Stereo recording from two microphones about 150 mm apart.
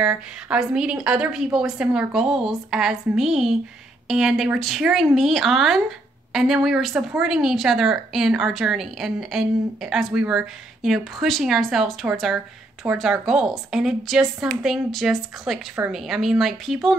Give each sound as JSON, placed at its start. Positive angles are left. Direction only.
{"t": 0.0, "sound": "a woman's voice", "side_deg": -5}